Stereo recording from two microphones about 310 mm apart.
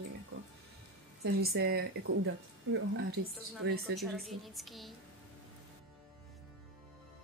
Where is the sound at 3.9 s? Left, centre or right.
Centre.